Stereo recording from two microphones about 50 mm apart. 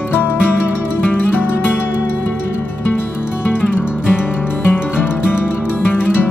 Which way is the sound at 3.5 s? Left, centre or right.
Left.